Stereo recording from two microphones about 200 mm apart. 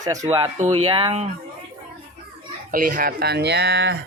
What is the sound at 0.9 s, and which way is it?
Speech, 25° right (ahead or behind).